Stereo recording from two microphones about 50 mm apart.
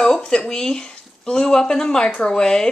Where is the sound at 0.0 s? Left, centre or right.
Centre.